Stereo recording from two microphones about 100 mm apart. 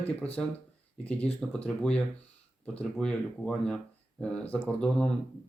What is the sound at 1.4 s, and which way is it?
Speech, 10° left (ahead or behind).